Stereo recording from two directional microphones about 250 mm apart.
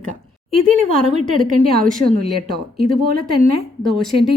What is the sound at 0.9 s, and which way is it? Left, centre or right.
A woman's voice, centre.